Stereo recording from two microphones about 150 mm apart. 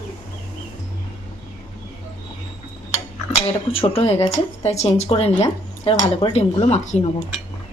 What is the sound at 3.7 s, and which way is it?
Speech, 40° left (ahead or behind).